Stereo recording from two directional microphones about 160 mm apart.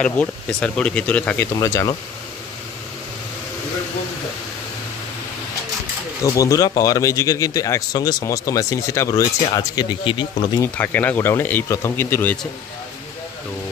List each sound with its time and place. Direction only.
0.0 s speech: 5° left (ahead or behind)
1.6 s a man's voice: 20° left (ahead or behind)
6.2 s a man's voice: 20° left (ahead or behind)
10.6 s speech: 10° left (ahead or behind)